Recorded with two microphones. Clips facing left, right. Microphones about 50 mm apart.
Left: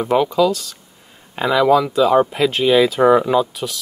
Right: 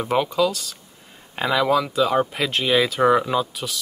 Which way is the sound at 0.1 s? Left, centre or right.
Centre.